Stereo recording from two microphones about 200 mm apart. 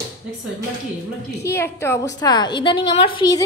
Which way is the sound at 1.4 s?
15° left (ahead or behind).